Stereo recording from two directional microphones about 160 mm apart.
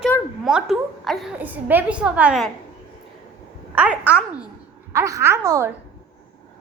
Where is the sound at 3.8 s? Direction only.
10° right (ahead or behind).